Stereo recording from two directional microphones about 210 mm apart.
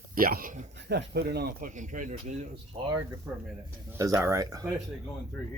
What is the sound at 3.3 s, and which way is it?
Speech, 15° right (ahead or behind).